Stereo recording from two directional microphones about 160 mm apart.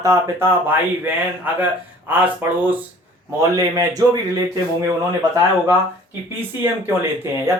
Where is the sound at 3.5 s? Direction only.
20° right (ahead or behind).